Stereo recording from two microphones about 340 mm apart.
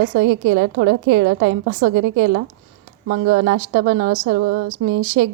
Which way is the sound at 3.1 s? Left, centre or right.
Right.